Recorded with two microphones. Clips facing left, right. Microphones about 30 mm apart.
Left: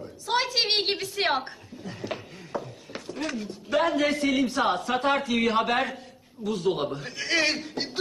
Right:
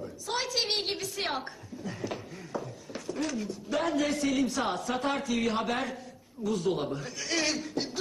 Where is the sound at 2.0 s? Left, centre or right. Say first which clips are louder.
Left 2 dB; left.